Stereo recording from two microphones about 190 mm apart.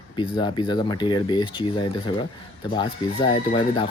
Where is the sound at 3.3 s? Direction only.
25° left (ahead or behind).